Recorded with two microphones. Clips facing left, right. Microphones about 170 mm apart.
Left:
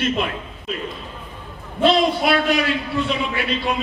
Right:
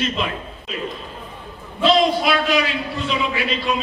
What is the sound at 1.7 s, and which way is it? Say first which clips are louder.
A man's voice: even; 55° left (ahead or behind).